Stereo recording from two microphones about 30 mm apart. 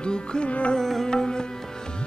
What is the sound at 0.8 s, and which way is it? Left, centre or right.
Music, centre.